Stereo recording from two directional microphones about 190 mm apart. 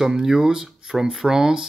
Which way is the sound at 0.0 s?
5° right (ahead or behind).